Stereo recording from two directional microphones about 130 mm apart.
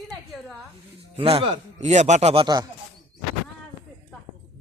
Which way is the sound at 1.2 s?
50° right (ahead or behind).